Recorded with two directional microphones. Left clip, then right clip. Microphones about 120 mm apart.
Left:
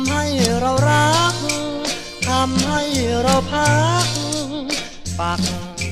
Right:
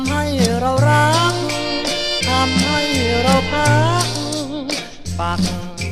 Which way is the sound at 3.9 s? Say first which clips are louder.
Even; 40° left (ahead or behind).